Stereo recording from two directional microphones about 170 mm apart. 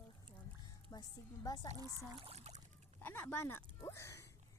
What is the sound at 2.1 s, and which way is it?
Speech, 35° right (ahead or behind).